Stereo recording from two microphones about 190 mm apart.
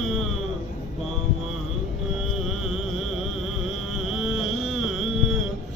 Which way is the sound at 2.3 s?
Centre (ahead or behind).